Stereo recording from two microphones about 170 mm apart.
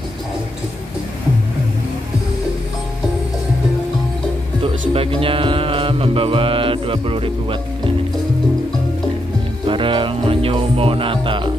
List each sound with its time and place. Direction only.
4.9 s mantra: 35° right (ahead or behind)
9.7 s speech: 30° right (ahead or behind)